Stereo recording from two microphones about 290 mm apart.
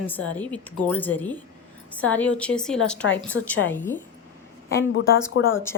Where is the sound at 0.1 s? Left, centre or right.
Centre.